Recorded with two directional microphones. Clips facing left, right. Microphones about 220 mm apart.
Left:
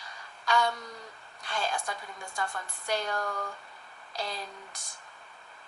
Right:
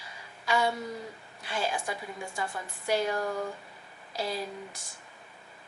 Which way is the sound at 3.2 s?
25° right (ahead or behind).